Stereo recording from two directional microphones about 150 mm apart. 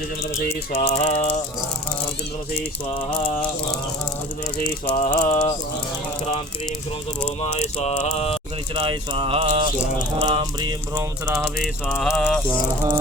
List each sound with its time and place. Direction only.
0.7 s music: 40° left (ahead or behind)
4.6 s rattle: 60° left (ahead or behind)
7.4 s a sound: 50° left (ahead or behind)
8.7 s speech: 35° right (ahead or behind)
10.2 s music: 30° right (ahead or behind)
11.9 s rattle: 5° right (ahead or behind)